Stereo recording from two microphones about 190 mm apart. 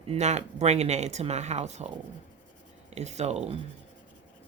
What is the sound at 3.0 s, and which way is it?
Speech, 35° right (ahead or behind).